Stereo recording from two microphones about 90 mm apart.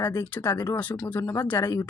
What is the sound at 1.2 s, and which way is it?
Speech, 30° left (ahead or behind).